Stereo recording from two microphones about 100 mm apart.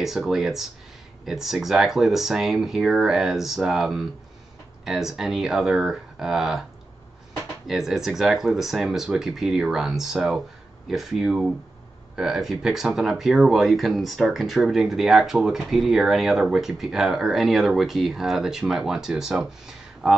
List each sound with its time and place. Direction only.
0.0 s speech: 5° right (ahead or behind)
7.6 s speech: 5° right (ahead or behind)